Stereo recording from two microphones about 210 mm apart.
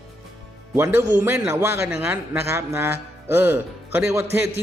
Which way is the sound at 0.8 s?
10° right (ahead or behind).